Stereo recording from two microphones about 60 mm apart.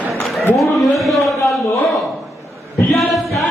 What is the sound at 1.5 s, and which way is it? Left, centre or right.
Speech, centre.